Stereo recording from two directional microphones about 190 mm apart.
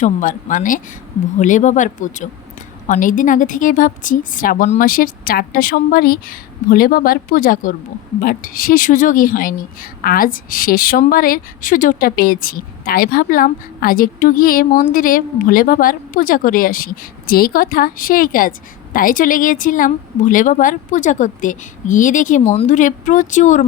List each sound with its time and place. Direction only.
0.0 s a woman's voice: 40° left (ahead or behind)